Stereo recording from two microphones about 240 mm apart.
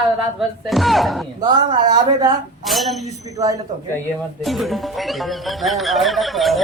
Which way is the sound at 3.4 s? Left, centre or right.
Centre.